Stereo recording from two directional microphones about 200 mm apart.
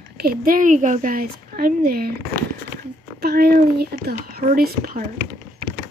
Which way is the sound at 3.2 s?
50° right (ahead or behind).